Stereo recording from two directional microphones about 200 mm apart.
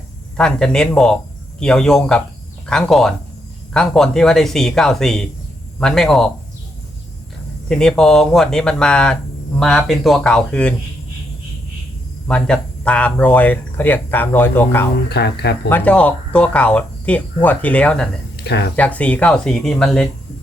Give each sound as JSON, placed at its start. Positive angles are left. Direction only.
{"t": 0.3, "sound": "speech", "side_deg": 5}
{"t": 7.7, "sound": "speech", "side_deg": 5}
{"t": 12.3, "sound": "speech", "side_deg": 5}
{"t": 15.1, "sound": "speech", "side_deg": 55}
{"t": 15.7, "sound": "speech", "side_deg": 5}
{"t": 18.4, "sound": "speech", "side_deg": 55}
{"t": 18.8, "sound": "speech", "side_deg": 5}